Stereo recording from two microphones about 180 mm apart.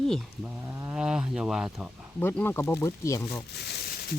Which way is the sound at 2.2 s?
10° left (ahead or behind).